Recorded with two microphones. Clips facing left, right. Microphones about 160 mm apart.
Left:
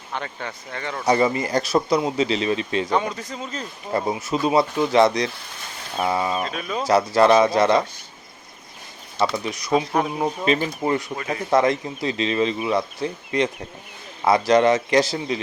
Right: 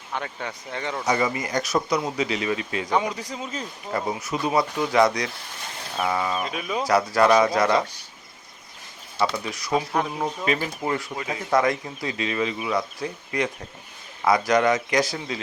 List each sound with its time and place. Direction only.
0.1 s speech: 10° right (ahead or behind)
1.0 s speech: 35° left (ahead or behind)
2.9 s speech: 10° right (ahead or behind)
3.9 s speech: 25° left (ahead or behind)
6.4 s speech: 10° right (ahead or behind)
6.8 s speech: 25° left (ahead or behind)
9.2 s speech: 20° left (ahead or behind)